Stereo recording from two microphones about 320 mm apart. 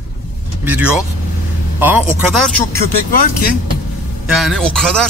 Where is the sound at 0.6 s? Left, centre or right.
Centre.